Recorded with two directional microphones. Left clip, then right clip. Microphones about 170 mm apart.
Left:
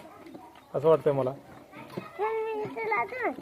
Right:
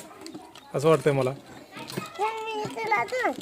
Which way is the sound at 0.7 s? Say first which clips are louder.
Right 1 dB; 90° right.